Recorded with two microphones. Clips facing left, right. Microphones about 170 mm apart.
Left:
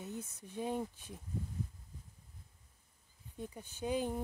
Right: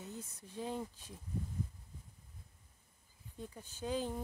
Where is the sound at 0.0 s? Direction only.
15° left (ahead or behind).